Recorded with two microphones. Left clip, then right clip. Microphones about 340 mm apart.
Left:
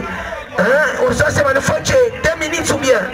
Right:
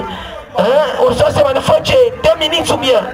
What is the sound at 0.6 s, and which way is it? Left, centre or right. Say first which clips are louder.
Speech: right 2 dB; centre.